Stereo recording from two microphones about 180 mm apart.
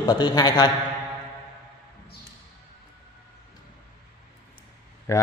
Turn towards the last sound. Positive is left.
turn(degrees=15)  # may be behind; listen again after turning